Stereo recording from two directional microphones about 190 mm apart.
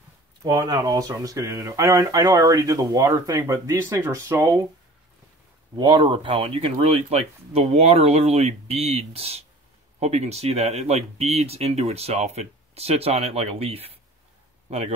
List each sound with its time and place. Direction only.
0.4 s speech: 20° right (ahead or behind)
5.8 s speech: 25° right (ahead or behind)